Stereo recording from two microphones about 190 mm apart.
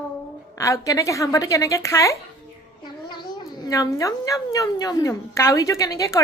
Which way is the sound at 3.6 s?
20° left (ahead or behind).